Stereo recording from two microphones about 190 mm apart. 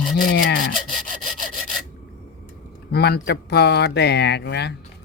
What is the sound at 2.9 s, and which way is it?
Speech, 60° left (ahead or behind).